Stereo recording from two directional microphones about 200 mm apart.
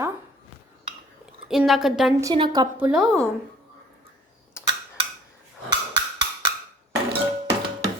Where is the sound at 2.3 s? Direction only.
25° right (ahead or behind).